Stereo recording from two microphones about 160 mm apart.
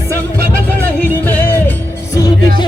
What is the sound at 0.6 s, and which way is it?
Music, 10° left (ahead or behind).